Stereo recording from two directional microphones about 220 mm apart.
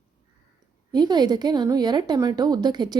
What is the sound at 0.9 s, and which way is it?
A woman's voice, 20° right (ahead or behind).